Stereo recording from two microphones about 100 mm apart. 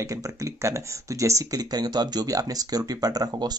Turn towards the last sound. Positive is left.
turn(degrees=-40)  # may be behind; listen again after turning